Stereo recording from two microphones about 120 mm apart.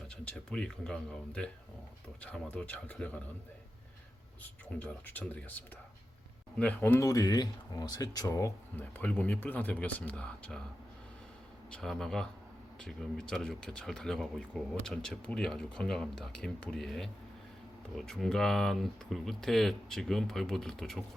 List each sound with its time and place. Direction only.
0.3 s speech: 5° left (ahead or behind)
4.8 s speech: 15° left (ahead or behind)
7.0 s speech: 30° left (ahead or behind); by 10.6 s 10° left (ahead or behind)
11.7 s speech: 5° left (ahead or behind)